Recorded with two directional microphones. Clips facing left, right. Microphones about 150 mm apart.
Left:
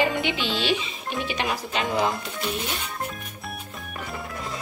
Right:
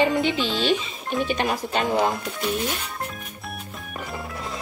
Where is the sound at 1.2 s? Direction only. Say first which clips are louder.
Right 4 dB; 45° right (ahead or behind).